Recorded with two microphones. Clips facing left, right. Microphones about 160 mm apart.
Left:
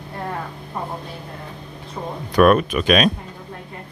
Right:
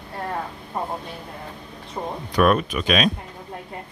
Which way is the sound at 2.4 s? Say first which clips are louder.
Left 4 dB; 60° left (ahead or behind).